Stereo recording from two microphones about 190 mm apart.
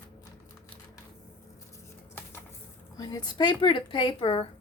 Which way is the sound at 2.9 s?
20° left (ahead or behind).